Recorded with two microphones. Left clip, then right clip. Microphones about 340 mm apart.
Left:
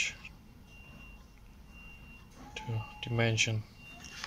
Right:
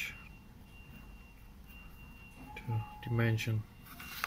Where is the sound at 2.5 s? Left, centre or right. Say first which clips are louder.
Left 2 dB; centre.